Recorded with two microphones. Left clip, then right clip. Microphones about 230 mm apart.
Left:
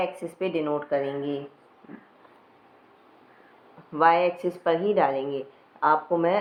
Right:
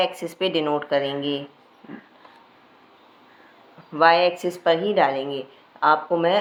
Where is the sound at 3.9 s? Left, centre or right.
Centre.